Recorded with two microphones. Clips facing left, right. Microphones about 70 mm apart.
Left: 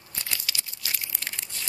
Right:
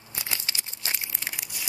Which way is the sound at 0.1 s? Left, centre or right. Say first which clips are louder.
Right 1 dB; centre.